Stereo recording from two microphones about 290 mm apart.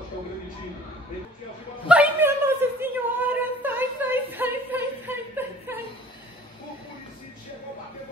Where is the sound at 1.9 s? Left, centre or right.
Centre.